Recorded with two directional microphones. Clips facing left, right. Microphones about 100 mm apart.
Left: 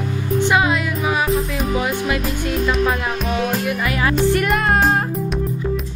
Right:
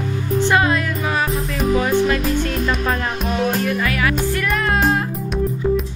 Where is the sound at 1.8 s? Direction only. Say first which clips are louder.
Right 5 dB; 10° left (ahead or behind).